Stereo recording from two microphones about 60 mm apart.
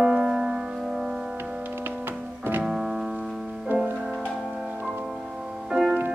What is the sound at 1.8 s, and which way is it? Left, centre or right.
Music, right.